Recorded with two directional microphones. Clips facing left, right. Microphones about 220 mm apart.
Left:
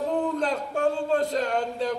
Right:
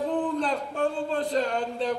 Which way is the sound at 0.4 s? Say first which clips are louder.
Left 1 dB; 45° left (ahead or behind).